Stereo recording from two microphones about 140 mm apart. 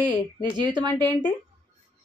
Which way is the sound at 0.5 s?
30° right (ahead or behind).